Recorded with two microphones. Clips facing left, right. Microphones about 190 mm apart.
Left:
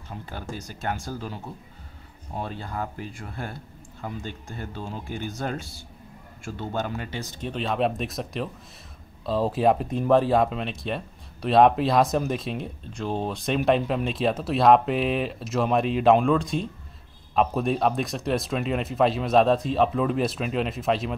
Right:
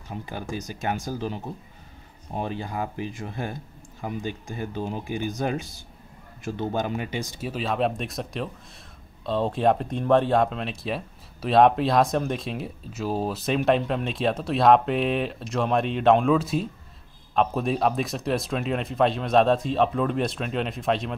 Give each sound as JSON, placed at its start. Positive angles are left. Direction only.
{"t": 0.1, "sound": "speech", "side_deg": -15}